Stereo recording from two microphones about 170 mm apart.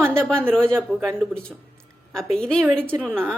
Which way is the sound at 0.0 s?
15° right (ahead or behind).